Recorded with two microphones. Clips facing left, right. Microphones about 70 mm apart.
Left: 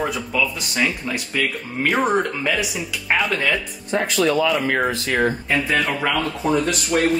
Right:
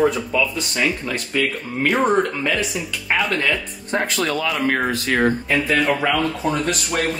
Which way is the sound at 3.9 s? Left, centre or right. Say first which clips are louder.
Left 2 dB; right.